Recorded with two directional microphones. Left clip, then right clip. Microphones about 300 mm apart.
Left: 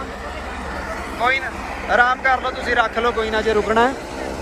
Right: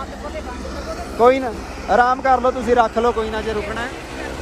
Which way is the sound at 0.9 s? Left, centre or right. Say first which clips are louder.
Right 6 dB; centre.